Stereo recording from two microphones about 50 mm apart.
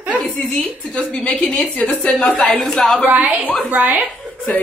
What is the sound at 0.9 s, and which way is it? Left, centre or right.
A woman's voice, left.